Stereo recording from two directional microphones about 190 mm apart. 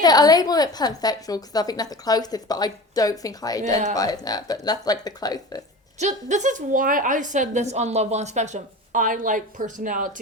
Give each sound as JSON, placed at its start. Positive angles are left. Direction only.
{"t": 0.0, "sound": "a woman's voice", "side_deg": 20}
{"t": 6.0, "sound": "a woman's voice", "side_deg": -40}